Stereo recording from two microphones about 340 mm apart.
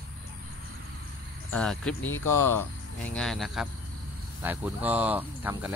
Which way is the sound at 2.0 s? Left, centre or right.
Left.